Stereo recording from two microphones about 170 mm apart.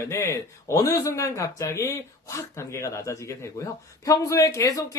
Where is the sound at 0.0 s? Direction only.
15° left (ahead or behind).